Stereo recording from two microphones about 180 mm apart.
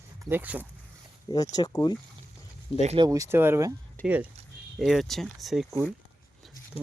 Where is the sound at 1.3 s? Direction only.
20° left (ahead or behind).